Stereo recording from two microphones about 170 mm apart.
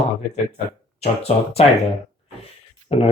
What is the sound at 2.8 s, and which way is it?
Speech, 35° left (ahead or behind).